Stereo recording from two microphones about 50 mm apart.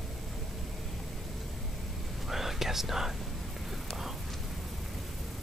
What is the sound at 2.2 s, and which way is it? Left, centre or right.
Whispering, centre.